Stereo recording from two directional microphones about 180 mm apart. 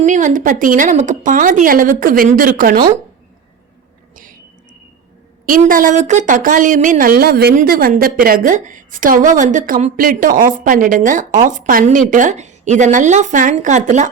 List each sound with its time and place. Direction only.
0.0 s a woman's voice: 45° right (ahead or behind)
4.1 s a sound: 50° right (ahead or behind)
5.5 s a woman's voice: 50° right (ahead or behind)